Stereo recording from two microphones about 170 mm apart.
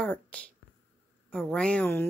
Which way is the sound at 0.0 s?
5° left (ahead or behind).